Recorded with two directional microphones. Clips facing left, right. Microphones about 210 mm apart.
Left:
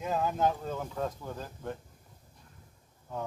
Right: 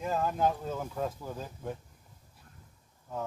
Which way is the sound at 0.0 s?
Centre (ahead or behind).